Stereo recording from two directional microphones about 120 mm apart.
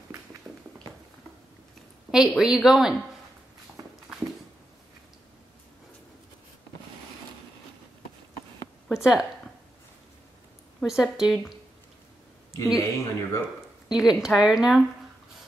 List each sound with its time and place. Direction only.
2.0 s a woman's voice: 5° right (ahead or behind)
8.8 s a sound: 5° right (ahead or behind)
10.8 s a woman's voice: 5° right (ahead or behind)
12.7 s speech: 25° left (ahead or behind)
13.8 s a woman's voice: 5° right (ahead or behind)